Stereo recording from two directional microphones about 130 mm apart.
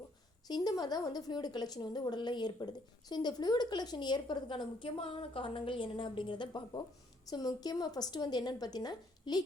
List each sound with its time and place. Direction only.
0.4 s a woman's voice: 30° left (ahead or behind)